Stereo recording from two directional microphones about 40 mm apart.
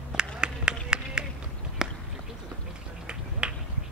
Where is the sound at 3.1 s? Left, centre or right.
Right.